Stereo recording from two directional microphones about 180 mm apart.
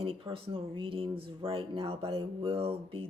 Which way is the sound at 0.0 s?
30° right (ahead or behind).